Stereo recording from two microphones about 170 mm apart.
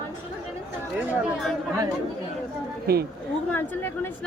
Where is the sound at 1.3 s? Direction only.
Centre (ahead or behind).